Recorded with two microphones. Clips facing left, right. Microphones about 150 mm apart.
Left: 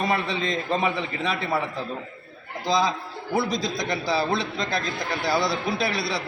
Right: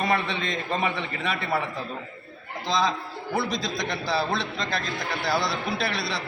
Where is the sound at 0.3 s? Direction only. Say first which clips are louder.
Left 3 dB; 35° left (ahead or behind).